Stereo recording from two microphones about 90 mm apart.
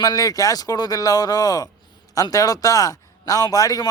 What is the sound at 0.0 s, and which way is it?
Speech, 45° left (ahead or behind).